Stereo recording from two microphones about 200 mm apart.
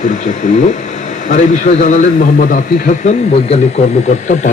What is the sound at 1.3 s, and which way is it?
A man's voice, 40° left (ahead or behind).